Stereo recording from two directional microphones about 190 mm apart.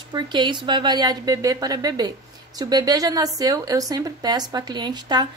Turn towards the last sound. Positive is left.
turn(degrees=-20)  # may be behind; listen again after turning